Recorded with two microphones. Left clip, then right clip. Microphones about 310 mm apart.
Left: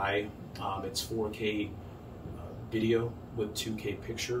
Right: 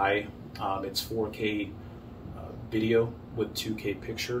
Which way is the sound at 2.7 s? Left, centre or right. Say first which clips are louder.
Right 4 dB; centre.